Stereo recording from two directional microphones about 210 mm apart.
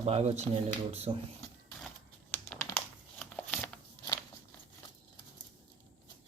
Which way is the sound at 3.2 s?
5° left (ahead or behind).